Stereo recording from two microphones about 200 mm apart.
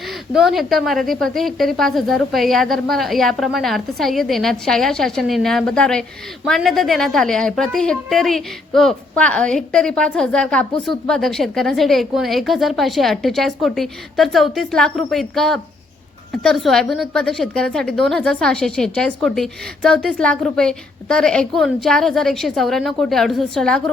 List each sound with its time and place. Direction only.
0.0 s a woman's voice: centre (ahead or behind)